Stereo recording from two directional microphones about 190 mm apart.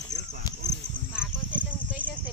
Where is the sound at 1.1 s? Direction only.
5° right (ahead or behind).